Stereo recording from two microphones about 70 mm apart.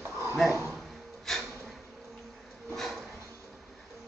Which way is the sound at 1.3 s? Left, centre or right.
Centre.